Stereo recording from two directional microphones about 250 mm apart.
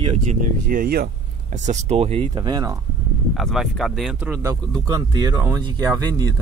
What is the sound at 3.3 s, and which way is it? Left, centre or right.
Speech, centre.